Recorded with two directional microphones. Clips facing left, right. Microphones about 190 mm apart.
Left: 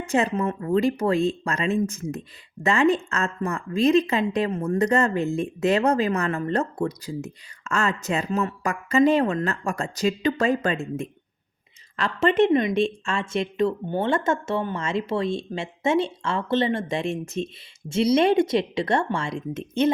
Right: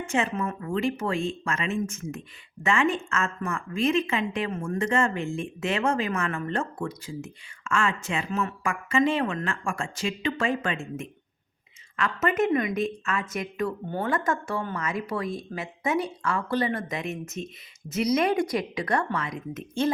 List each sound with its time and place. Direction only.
0.0 s a woman's voice: 35° left (ahead or behind); by 19.9 s 20° left (ahead or behind)